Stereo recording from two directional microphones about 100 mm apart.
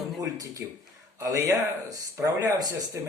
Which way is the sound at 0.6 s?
15° right (ahead or behind).